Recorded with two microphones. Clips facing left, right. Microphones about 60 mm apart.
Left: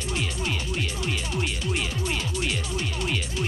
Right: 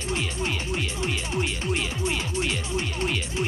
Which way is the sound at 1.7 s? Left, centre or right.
Centre.